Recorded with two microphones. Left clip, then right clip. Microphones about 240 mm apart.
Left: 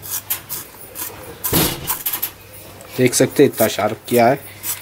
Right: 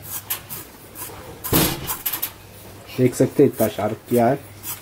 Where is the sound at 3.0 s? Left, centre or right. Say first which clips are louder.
Left 3 dB; centre.